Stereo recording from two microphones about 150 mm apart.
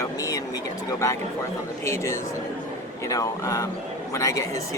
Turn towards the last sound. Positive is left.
turn(degrees=20)  # may be behind; listen again after turning